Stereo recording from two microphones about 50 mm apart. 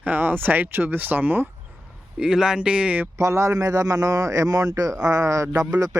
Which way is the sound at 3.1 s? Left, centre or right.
Right.